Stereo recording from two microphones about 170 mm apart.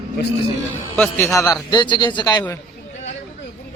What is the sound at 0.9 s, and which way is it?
A man's voice, 10° left (ahead or behind).